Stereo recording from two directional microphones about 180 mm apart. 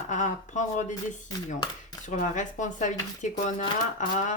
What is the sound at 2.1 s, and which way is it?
Speech, 45° left (ahead or behind).